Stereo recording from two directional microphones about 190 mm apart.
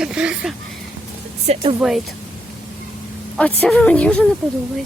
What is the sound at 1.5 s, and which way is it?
Speech, 35° right (ahead or behind).